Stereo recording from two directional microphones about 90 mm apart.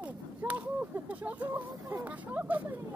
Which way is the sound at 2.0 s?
20° right (ahead or behind).